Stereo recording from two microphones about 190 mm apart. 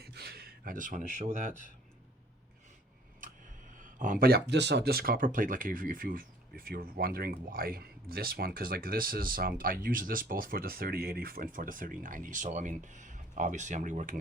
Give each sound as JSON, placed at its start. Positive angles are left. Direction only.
{"t": 0.0, "sound": "a sound", "side_deg": -55}
{"t": 1.2, "sound": "speech", "side_deg": -40}
{"t": 3.8, "sound": "speech", "side_deg": -45}